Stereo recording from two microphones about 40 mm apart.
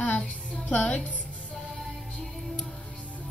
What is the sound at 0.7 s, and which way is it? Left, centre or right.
Speech, left.